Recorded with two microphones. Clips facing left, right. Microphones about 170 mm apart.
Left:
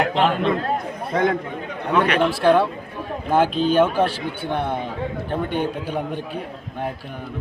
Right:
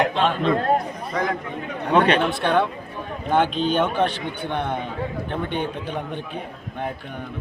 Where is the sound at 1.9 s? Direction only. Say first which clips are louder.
Right 1 dB; 30° right (ahead or behind).